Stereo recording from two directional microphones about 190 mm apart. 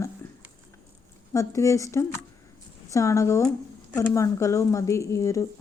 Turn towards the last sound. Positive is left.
turn(degrees=15)  # may be behind; listen again after turning